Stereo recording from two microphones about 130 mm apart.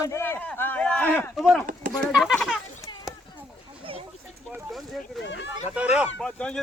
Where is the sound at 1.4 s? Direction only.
Centre (ahead or behind).